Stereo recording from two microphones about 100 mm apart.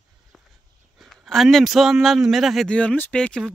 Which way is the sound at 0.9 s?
Centre (ahead or behind).